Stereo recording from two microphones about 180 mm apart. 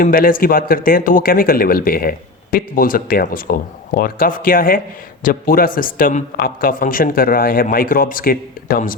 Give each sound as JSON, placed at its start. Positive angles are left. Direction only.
{"t": 0.0, "sound": "a man's voice", "side_deg": 50}